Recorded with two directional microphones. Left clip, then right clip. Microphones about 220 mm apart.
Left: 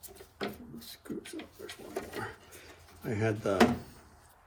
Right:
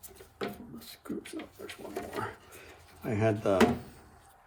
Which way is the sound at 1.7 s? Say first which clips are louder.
Even; centre (ahead or behind).